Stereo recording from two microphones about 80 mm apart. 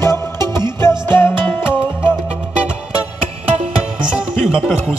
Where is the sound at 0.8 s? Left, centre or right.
Left.